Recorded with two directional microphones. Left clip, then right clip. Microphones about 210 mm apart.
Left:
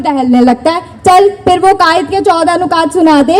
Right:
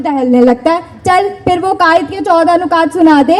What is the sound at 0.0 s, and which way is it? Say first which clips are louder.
A woman's voice: even; 50° left (ahead or behind).